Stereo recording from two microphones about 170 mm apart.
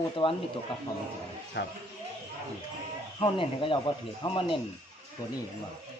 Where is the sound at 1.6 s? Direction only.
90° left.